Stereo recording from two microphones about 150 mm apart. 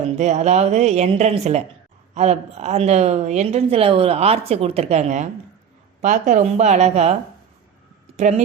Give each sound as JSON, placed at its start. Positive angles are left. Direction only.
{"t": 0.2, "sound": "a woman's voice", "side_deg": -50}
{"t": 8.1, "sound": "speech", "side_deg": -50}